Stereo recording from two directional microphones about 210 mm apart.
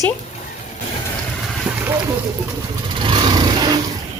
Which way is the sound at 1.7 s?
5° right (ahead or behind).